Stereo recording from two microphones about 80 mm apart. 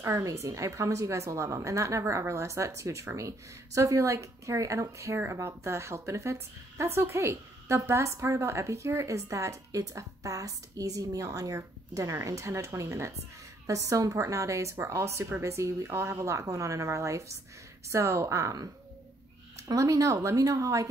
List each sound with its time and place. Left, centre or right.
0.0 s a woman's voice: right
19.7 s speech: right